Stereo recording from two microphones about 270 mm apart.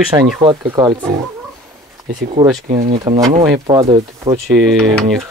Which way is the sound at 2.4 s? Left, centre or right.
Right.